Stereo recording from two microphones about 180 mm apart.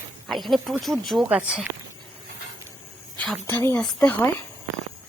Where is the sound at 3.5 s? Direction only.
15° left (ahead or behind).